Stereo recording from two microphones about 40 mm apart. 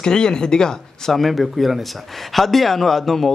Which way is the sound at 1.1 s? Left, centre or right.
Centre.